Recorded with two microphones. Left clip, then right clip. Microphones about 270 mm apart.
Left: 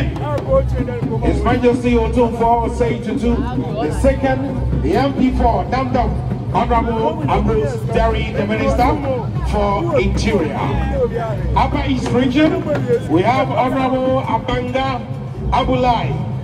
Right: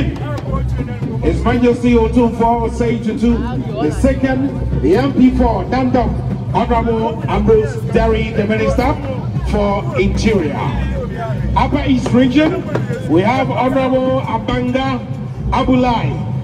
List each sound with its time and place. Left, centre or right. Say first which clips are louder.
1.2 s a man's voice: right 1 dB; right